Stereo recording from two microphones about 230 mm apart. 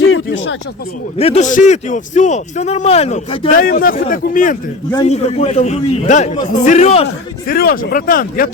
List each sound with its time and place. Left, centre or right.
0.0 s a sound: left
1.2 s a man's voice: left
3.5 s a man's voice: left
7.4 s speech: left